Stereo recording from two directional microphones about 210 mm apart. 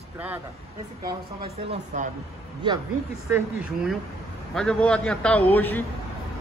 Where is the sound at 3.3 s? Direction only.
10° right (ahead or behind).